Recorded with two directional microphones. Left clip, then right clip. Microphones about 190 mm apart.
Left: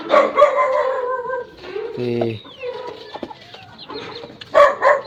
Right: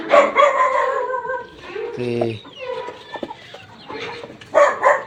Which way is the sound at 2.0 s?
20° left (ahead or behind).